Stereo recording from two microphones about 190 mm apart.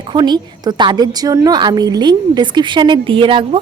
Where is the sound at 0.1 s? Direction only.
20° right (ahead or behind).